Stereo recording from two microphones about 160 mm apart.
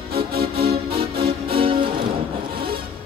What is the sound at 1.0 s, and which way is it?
Music, 35° right (ahead or behind).